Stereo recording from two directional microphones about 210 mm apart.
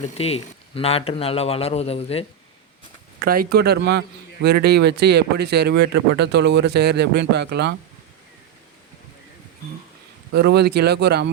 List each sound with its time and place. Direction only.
0.2 s a man's voice: 30° left (ahead or behind)
3.2 s speech: 45° right (ahead or behind)
10.3 s speech: 50° right (ahead or behind)